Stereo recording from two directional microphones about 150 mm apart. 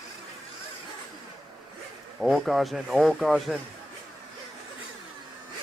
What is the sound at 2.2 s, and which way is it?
Speech, centre (ahead or behind).